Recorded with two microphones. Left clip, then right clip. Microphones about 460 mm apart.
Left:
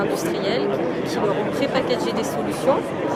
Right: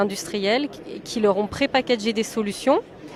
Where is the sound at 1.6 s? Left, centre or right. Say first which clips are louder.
Even; right.